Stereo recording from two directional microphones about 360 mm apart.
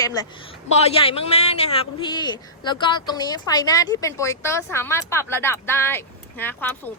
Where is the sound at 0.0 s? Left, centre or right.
Centre.